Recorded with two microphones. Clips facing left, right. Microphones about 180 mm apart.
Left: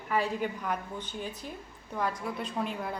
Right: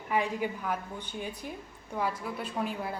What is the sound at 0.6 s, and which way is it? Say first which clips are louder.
Speech: even; 10° right (ahead or behind).